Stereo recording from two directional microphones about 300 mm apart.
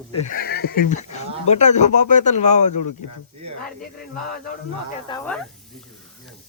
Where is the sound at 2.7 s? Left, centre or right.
Left.